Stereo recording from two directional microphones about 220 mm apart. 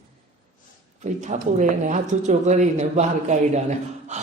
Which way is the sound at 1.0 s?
35° right (ahead or behind).